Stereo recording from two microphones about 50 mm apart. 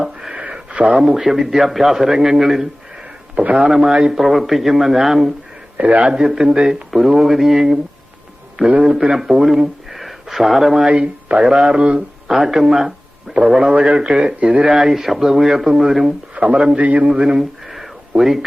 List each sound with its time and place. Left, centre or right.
0.0 s a sound: centre
0.7 s speech: right
1.0 s a man's voice: centre
3.3 s a man's voice: right
3.7 s a man's voice: centre
5.7 s a man's voice: right
6.1 s a man's voice: centre
6.9 s a man's voice: centre
8.8 s speech: centre
11.0 s speech: right
11.4 s speech: centre
13.6 s a man's voice: right
16.8 s a man's voice: right
17.1 s speech: centre